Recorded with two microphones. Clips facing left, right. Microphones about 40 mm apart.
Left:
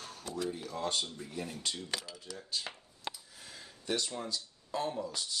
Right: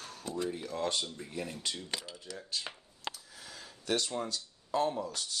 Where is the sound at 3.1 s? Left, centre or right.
Right.